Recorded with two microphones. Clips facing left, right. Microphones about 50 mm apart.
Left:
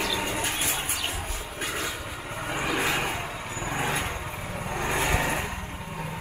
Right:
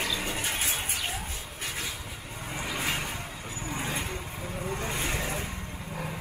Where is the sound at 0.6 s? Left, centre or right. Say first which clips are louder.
Left 2 dB; left.